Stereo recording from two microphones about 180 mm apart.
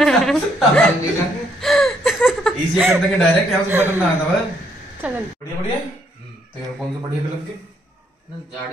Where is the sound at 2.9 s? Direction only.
10° right (ahead or behind).